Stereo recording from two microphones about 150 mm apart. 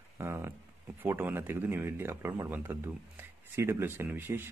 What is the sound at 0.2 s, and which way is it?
Speech, 15° right (ahead or behind).